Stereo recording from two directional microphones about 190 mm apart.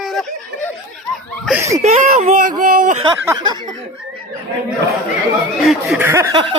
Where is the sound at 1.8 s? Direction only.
35° right (ahead or behind).